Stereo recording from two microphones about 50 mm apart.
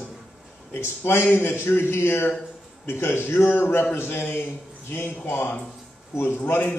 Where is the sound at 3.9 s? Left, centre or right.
Left.